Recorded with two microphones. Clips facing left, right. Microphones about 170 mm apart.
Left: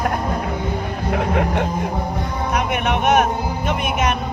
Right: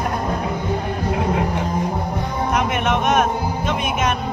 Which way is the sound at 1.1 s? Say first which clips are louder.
Left 4 dB; 65° left (ahead or behind).